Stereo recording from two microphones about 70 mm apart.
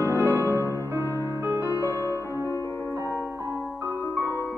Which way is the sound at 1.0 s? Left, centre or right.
Left.